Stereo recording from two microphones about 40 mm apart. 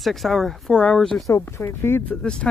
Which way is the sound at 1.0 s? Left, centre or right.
Centre.